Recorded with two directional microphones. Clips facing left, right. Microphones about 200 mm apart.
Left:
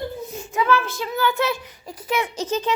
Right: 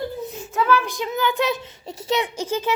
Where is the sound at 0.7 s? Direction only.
15° right (ahead or behind).